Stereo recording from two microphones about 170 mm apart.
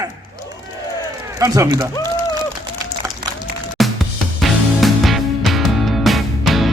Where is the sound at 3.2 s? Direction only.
65° right (ahead or behind).